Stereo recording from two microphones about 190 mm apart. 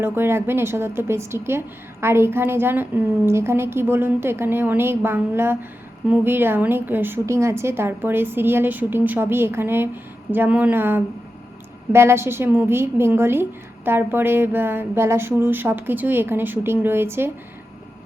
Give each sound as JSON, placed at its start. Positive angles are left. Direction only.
{"t": 0.0, "sound": "a woman's voice", "side_deg": -10}